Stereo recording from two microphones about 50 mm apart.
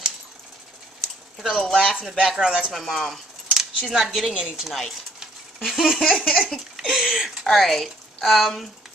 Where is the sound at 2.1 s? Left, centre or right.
Centre.